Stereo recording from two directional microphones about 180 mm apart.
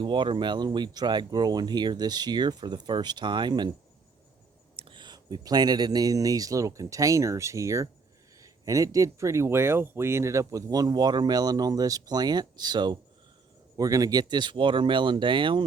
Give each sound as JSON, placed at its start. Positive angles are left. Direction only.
{"t": 0.0, "sound": "speech", "side_deg": -25}
{"t": 4.8, "sound": "speech", "side_deg": -25}